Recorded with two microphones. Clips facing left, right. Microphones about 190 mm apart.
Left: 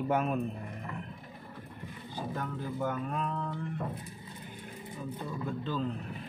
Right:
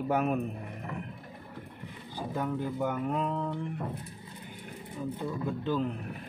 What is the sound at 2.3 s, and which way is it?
Speech, 15° right (ahead or behind).